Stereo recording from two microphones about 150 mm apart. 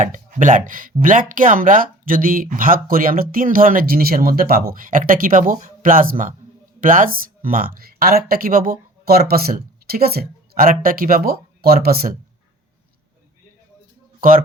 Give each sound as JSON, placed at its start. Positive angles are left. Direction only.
{"t": 0.0, "sound": "speech", "side_deg": -55}
{"t": 14.2, "sound": "speech", "side_deg": -65}